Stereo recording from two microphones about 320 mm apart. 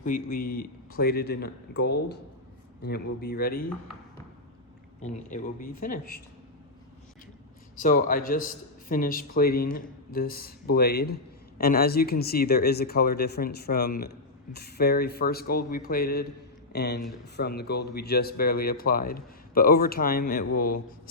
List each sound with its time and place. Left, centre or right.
0.3 s speech: left
4.9 s speech: left
7.8 s speech: left